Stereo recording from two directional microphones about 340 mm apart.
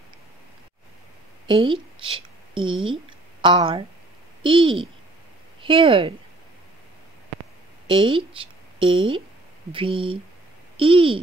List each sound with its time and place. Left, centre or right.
1.5 s a woman's voice: centre
2.9 s a sound: centre
4.4 s speech: centre
7.8 s a woman's voice: centre